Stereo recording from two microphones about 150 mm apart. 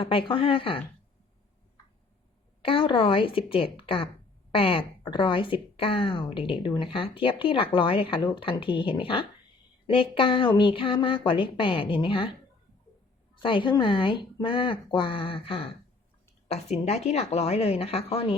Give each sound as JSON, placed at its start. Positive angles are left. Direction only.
{"t": 0.0, "sound": "speech", "side_deg": 35}
{"t": 2.6, "sound": "speech", "side_deg": 35}
{"t": 13.3, "sound": "speech", "side_deg": 35}